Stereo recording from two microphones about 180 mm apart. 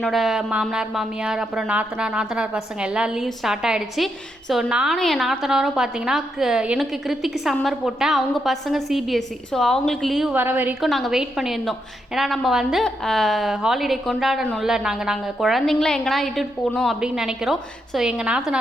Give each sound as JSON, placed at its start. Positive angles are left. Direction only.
{"t": 0.0, "sound": "a woman's voice", "side_deg": 0}
{"t": 10.8, "sound": "a woman's voice", "side_deg": 0}